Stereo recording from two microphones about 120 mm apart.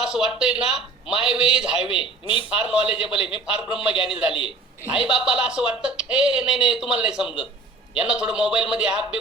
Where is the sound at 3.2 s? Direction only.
45° left (ahead or behind).